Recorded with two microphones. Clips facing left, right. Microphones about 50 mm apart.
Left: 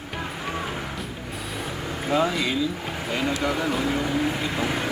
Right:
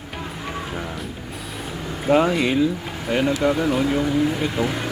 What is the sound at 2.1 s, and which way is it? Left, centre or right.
Speech, right.